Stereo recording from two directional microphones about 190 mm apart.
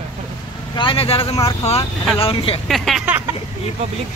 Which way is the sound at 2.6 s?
Centre (ahead or behind).